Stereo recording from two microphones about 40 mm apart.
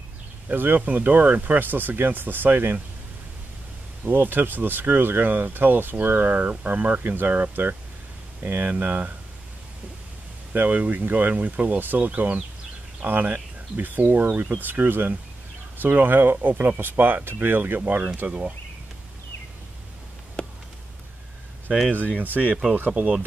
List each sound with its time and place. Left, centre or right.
0.5 s speech: right
4.0 s speech: right
10.5 s speech: right
20.4 s a sound: left
22.2 s speech: right
22.8 s speech: right